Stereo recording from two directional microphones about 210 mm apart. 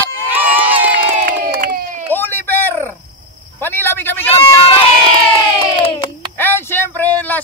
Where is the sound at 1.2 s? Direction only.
40° right (ahead or behind).